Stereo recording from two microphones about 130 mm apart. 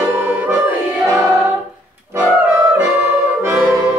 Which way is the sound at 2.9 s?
10° right (ahead or behind).